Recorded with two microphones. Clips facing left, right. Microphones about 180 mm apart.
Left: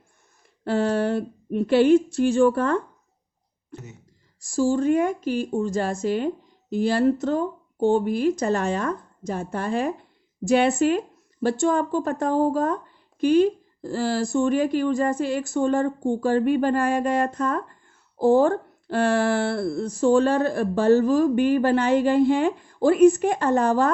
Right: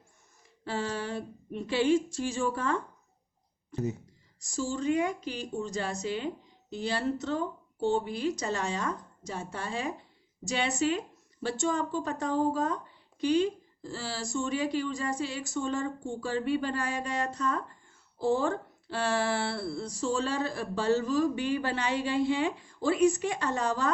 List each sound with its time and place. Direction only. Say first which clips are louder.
0.6 s speech: left 11 dB; 60° left (ahead or behind)